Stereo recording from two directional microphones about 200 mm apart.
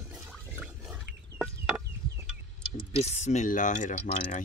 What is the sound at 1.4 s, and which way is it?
Chicken, 5° right (ahead or behind).